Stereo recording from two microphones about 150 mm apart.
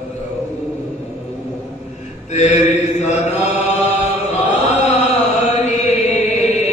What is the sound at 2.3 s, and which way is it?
Mantra, 50° left (ahead or behind).